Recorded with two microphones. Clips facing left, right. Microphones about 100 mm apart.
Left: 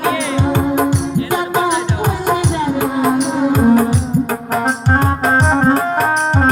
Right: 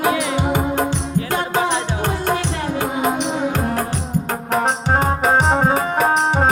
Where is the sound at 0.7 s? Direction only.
5° left (ahead or behind).